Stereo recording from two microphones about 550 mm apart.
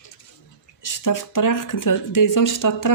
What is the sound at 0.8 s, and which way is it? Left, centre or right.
Speech, left.